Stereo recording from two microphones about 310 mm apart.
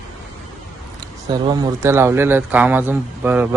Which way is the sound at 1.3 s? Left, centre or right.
Centre.